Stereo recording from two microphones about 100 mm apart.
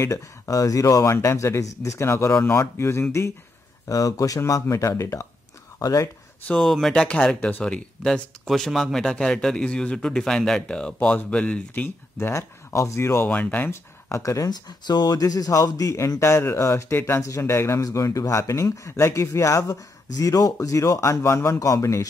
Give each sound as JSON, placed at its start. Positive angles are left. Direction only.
{"t": 0.0, "sound": "speech", "side_deg": 35}
{"t": 6.4, "sound": "speech", "side_deg": 15}
{"t": 13.3, "sound": "speech", "side_deg": 15}
{"t": 14.5, "sound": "speech", "side_deg": 45}